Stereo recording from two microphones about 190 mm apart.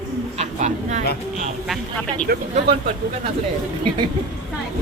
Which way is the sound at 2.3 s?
55° right (ahead or behind).